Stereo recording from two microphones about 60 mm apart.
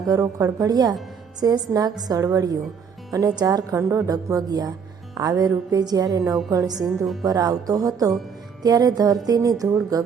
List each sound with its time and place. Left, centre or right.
0.1 s speech: right
3.8 s speech: right
6.7 s a woman's voice: centre
7.3 s speech: right